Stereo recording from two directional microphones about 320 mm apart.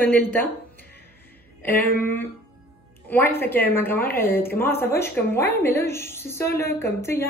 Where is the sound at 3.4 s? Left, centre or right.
Centre.